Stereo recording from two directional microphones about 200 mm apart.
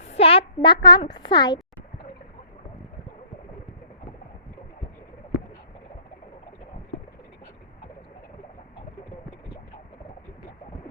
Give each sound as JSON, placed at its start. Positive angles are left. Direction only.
{"t": 0.0, "sound": "a child's voice", "side_deg": 30}